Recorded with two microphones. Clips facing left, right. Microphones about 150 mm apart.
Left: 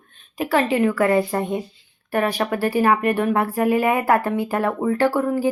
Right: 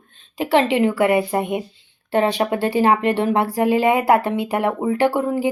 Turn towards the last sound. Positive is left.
turn(degrees=-20)  # may be behind; listen again after turning